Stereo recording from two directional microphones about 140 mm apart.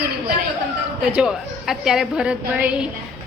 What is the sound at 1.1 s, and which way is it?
A woman's voice, 5° right (ahead or behind).